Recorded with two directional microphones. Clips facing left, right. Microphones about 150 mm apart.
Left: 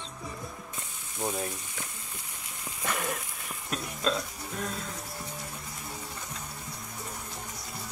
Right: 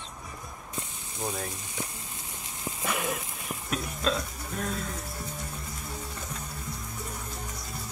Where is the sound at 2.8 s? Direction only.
10° right (ahead or behind).